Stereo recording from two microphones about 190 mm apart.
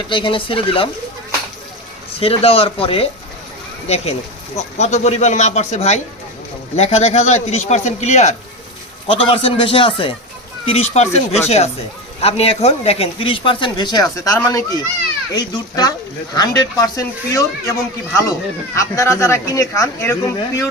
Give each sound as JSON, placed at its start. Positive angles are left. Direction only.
{"t": 0.1, "sound": "speech", "side_deg": 25}
{"t": 2.1, "sound": "speech", "side_deg": 30}